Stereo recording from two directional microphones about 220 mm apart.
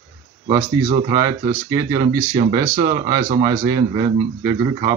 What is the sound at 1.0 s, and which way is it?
Speech, 15° right (ahead or behind).